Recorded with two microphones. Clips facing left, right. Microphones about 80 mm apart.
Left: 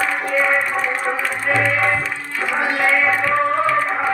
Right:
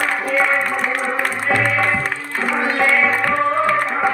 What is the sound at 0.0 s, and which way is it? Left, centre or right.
Music, right.